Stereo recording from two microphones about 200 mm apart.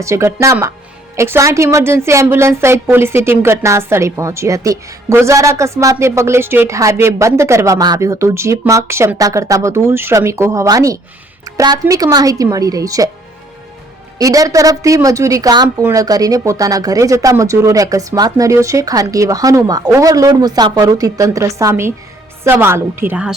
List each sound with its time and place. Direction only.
0.0 s a woman's voice: 15° right (ahead or behind)
14.2 s a woman's voice: 15° right (ahead or behind)